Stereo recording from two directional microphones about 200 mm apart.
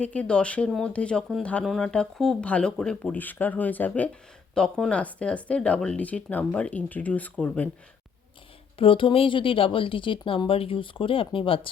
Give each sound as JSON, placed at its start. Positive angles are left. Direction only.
{"t": 0.0, "sound": "speech", "side_deg": 5}
{"t": 8.8, "sound": "speech", "side_deg": 25}